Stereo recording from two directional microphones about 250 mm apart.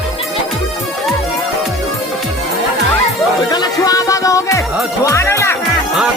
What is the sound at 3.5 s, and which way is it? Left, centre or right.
Music, centre.